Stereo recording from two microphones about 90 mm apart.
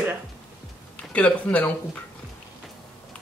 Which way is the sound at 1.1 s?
15° left (ahead or behind).